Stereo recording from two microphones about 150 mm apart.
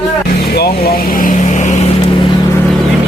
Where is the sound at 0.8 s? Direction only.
80° left; by 1.9 s 55° left (ahead or behind).